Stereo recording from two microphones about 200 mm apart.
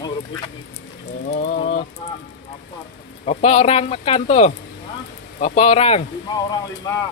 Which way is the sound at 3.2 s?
30° left (ahead or behind).